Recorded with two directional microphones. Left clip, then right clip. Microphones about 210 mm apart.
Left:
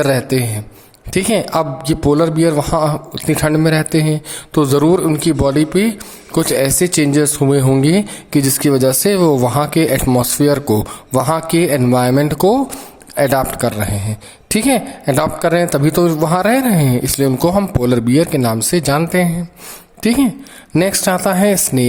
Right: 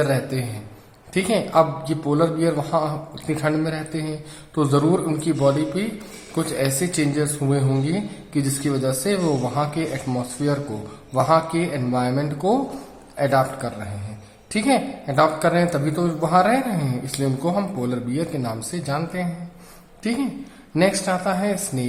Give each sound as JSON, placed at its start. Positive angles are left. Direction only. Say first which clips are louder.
{"t": 0.0, "sound": "a woman's voice", "louder": "left 8 dB", "side_deg": 45}